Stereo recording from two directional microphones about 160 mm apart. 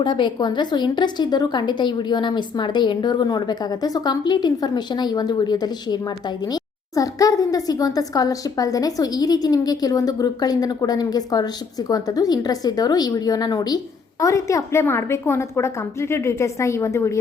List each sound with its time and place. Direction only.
0.0 s a woman's voice: 30° left (ahead or behind)